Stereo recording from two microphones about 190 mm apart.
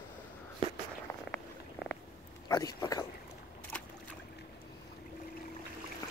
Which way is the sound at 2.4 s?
20° left (ahead or behind).